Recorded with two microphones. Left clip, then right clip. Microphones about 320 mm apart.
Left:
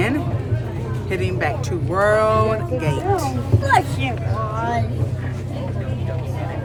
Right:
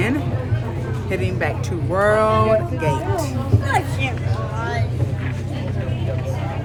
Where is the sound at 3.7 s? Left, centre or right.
Left.